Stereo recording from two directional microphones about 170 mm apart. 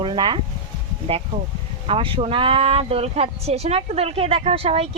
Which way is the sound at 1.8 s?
35° right (ahead or behind).